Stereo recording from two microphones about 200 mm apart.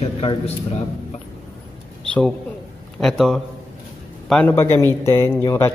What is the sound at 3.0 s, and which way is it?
A man's voice, centre (ahead or behind).